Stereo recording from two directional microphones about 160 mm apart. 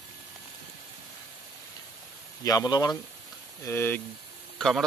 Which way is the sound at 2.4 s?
25° left (ahead or behind).